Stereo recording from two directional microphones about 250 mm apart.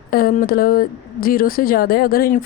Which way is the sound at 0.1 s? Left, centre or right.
Left.